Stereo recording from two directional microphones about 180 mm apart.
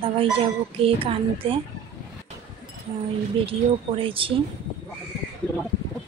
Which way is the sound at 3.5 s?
30° right (ahead or behind).